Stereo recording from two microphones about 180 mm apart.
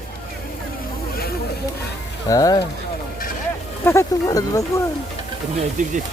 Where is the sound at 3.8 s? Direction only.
15° left (ahead or behind).